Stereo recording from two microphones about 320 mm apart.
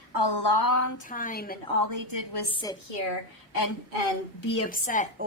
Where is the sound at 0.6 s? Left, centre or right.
Left.